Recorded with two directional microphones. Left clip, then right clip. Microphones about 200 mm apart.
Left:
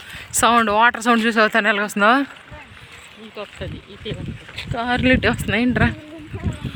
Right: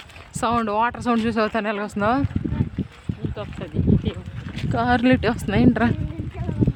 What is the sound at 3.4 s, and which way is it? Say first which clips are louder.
Speech: left 3 dB; 55° right (ahead or behind).